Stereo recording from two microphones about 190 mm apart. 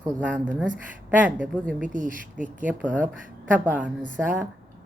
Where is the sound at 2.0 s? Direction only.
45° left (ahead or behind).